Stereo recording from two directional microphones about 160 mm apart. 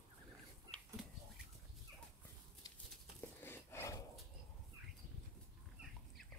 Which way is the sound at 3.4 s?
15° left (ahead or behind).